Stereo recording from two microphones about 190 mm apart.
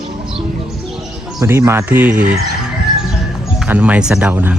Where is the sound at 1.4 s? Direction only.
15° right (ahead or behind).